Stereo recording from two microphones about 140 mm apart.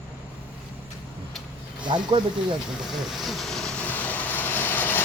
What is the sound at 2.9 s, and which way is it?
Vehicle, centre (ahead or behind).